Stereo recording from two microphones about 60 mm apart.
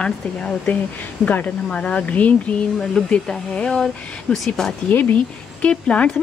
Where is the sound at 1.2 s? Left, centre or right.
Left.